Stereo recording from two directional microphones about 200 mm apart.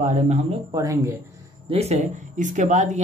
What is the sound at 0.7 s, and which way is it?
Speech, 15° right (ahead or behind).